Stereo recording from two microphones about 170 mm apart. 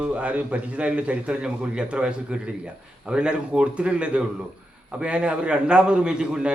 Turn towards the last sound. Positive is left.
turn(degrees=-5)  # may be behind; listen again after turning